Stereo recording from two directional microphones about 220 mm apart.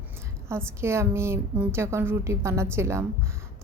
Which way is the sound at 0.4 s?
10° right (ahead or behind).